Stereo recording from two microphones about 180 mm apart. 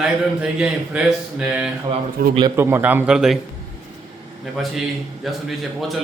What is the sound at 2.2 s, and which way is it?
Speech, 60° right (ahead or behind).